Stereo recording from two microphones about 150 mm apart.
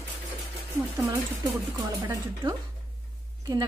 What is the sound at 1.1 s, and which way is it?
A woman's voice, 25° right (ahead or behind).